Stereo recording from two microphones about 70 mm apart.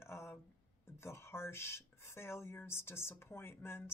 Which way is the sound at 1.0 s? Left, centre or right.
Left.